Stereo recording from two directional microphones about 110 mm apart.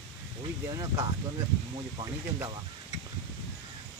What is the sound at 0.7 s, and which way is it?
Speech, 35° right (ahead or behind).